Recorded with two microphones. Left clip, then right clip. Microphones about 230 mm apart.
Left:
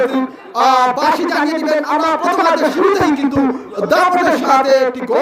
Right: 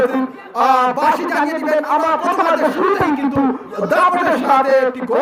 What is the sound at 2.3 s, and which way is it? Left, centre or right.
A man's voice, left.